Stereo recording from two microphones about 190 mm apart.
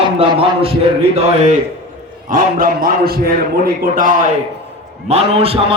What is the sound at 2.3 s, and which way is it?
A man's voice, 50° right (ahead or behind).